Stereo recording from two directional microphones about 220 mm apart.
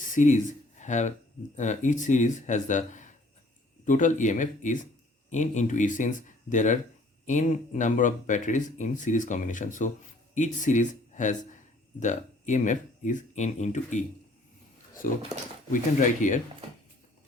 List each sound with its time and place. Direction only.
0.0 s speech: 35° left (ahead or behind)
15.0 s speech: 40° left (ahead or behind)